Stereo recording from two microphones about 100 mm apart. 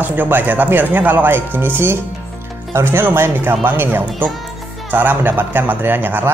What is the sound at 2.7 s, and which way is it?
Speech, 25° right (ahead or behind).